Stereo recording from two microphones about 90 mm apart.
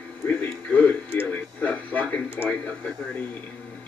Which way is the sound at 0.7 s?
15° left (ahead or behind).